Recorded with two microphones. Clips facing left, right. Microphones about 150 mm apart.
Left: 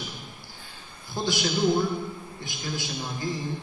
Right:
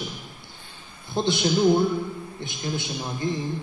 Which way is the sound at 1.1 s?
25° right (ahead or behind).